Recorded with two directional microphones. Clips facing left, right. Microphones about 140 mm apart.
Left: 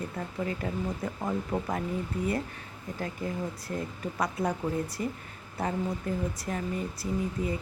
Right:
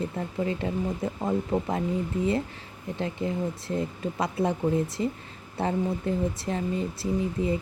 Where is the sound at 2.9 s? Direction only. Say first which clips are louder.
Right 5 dB; 25° right (ahead or behind).